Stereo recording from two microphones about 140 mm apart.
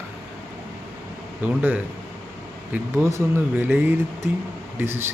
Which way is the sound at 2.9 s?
20° right (ahead or behind).